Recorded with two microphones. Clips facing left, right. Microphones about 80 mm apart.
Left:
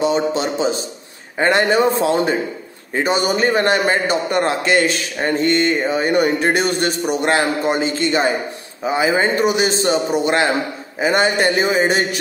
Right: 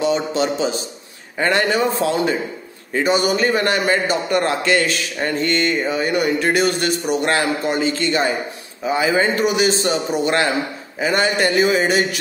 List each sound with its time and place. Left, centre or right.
0.0 s a man's voice: left